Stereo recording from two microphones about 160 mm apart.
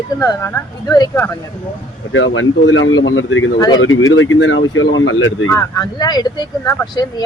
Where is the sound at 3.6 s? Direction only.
25° left (ahead or behind).